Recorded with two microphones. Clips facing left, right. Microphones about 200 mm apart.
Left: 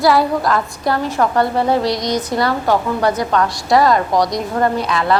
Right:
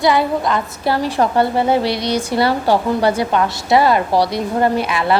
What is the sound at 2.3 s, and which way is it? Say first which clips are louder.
Speech: right 2 dB; 30° right (ahead or behind).